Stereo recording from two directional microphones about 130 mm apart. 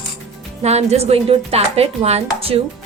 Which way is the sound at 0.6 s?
55° right (ahead or behind).